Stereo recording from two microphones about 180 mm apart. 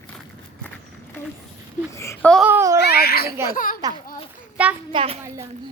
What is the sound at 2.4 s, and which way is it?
Babbling, 15° right (ahead or behind).